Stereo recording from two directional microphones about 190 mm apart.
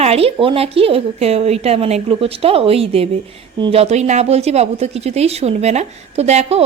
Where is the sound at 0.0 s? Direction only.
30° right (ahead or behind).